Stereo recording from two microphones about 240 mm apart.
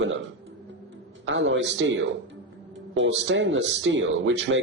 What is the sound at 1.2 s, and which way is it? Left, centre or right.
Speech, right.